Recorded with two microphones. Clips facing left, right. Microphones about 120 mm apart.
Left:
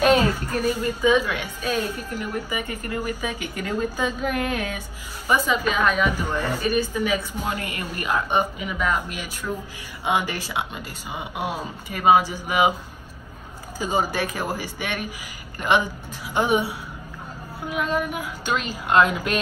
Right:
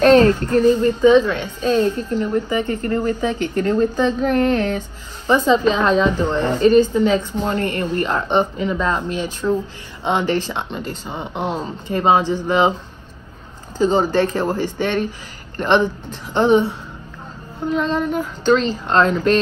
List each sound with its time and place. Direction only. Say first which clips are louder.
0.0 s a woman's voice: right 7 dB; 10° left (ahead or behind)
5.8 s speech: right 5 dB; 25° right (ahead or behind)
6.0 s a woman's voice: right 6 dB; 10° left (ahead or behind)
9.4 s speech: right 10 dB; 20° right (ahead or behind)
10.0 s a woman's voice: right 5 dB; 10° left (ahead or behind)
13.7 s a woman's voice: right 8 dB; 10° left (ahead or behind)